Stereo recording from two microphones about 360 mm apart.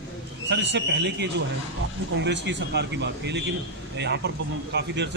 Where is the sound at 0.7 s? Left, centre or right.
Right.